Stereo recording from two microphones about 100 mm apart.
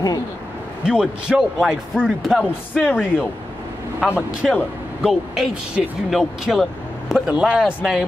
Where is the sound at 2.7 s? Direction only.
20° left (ahead or behind).